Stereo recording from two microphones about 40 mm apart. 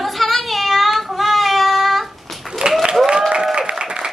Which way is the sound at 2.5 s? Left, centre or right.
Centre.